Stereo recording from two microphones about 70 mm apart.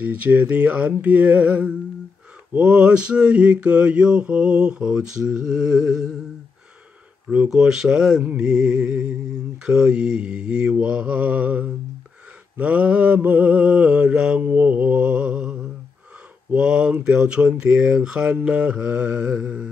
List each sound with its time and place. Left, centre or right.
0.0 s mantra: right; by 6.1 s centre
7.4 s mantra: centre
8.2 s mantra: right
8.5 s mantra: centre